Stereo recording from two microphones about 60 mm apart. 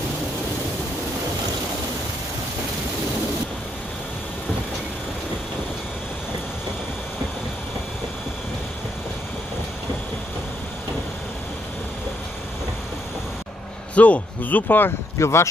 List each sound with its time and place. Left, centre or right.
13.9 s speech: left
15.1 s a man's voice: left